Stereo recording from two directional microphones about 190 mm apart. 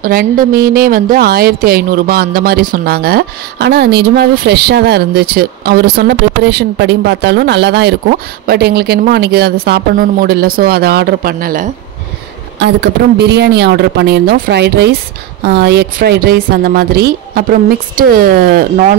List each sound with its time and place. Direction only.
0.0 s a woman's voice: 50° right (ahead or behind)
12.5 s a woman's voice: 65° right (ahead or behind)